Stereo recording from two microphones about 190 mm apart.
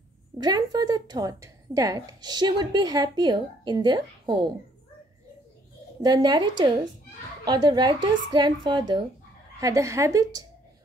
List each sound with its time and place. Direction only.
0.4 s a woman's voice: 20° right (ahead or behind)
6.0 s a woman's voice: 20° right (ahead or behind)